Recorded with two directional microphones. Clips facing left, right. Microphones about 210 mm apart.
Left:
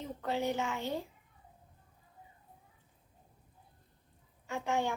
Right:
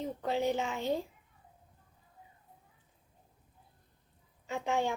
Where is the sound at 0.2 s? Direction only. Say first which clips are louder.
Right 1 dB; 15° right (ahead or behind).